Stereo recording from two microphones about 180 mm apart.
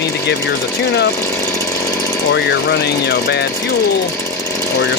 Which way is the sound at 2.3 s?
65° left (ahead or behind).